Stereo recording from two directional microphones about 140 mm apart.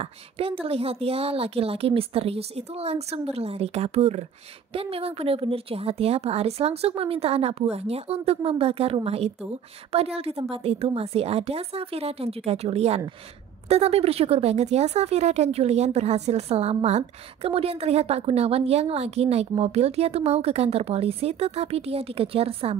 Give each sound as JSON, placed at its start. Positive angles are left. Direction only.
{"t": 0.0, "sound": "speech", "side_deg": -40}